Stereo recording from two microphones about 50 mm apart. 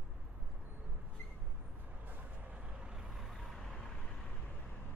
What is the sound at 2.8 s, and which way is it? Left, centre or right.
Vehicle, centre.